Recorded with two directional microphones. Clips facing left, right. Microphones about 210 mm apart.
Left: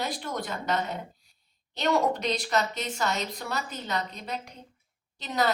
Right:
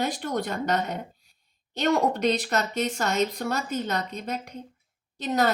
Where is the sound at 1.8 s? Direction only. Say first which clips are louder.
Right 3 dB; 45° right (ahead or behind).